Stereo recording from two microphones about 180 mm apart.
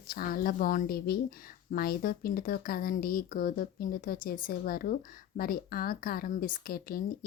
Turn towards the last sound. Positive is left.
turn(degrees=55)  # may be behind; listen again after turning